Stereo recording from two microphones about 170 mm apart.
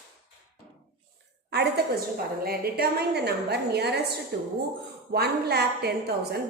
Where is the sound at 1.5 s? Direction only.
75° right (ahead or behind).